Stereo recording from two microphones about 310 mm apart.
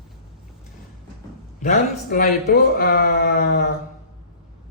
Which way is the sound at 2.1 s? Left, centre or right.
Left.